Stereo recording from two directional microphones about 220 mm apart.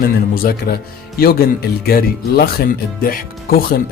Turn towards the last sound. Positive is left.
turn(degrees=40)  # may be behind; listen again after turning